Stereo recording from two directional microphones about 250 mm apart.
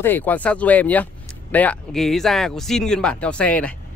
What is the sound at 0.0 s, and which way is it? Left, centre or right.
Speech, centre.